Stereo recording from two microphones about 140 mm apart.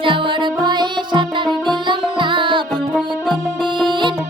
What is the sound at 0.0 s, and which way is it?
Music, 35° right (ahead or behind).